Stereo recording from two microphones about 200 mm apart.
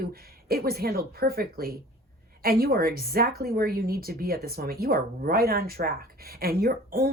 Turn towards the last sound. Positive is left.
turn(degrees=-50)  # may be behind; listen again after turning